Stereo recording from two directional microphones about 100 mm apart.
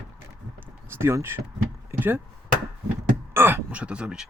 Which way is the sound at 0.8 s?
25° right (ahead or behind).